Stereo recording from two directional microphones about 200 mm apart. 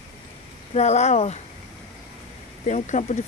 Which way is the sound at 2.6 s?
35° left (ahead or behind).